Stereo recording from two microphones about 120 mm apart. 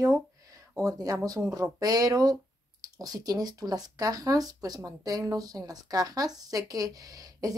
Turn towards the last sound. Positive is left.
turn(degrees=-30)  # may be behind; listen again after turning